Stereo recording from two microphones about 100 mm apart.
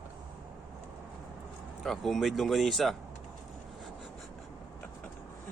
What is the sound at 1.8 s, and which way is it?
Speech, centre (ahead or behind).